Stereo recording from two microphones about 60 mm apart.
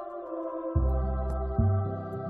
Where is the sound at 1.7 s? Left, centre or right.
Left.